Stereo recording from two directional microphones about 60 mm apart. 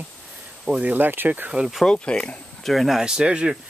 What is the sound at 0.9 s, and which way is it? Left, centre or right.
Speech, right.